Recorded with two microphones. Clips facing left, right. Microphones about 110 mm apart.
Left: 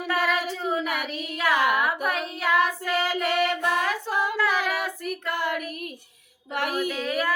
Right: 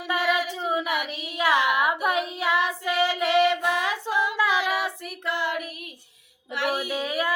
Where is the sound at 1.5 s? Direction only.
45° left (ahead or behind).